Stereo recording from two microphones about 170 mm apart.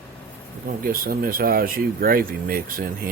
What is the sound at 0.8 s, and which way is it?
Rub, 60° right (ahead or behind).